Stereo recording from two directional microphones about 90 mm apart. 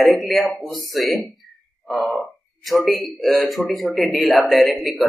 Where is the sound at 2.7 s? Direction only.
Centre (ahead or behind).